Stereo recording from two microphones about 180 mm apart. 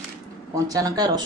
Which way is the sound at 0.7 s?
20° right (ahead or behind).